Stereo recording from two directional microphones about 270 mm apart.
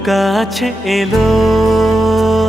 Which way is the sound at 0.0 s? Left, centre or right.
Centre.